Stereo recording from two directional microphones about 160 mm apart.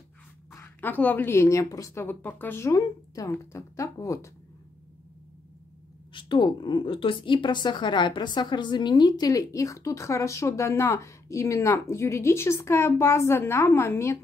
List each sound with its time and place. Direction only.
0.6 s a woman's voice: 10° left (ahead or behind)
6.1 s a woman's voice: 30° left (ahead or behind)